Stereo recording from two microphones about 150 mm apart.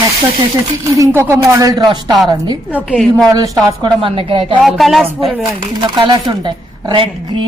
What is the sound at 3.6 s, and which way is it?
Speech, 30° right (ahead or behind).